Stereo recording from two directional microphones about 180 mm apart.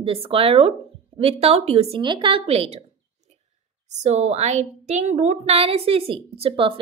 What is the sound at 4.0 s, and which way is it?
A woman's voice, 40° right (ahead or behind).